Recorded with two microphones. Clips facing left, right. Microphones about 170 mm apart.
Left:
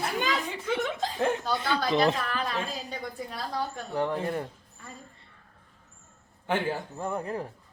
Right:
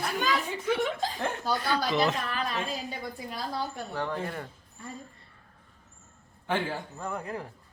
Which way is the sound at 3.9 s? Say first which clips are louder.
Left 6 dB; 20° left (ahead or behind).